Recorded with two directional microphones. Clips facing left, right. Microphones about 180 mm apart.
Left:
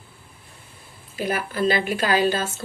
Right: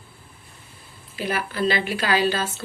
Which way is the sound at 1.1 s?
45° left (ahead or behind).